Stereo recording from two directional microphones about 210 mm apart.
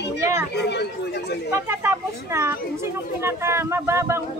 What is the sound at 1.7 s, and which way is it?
Speech, 10° right (ahead or behind).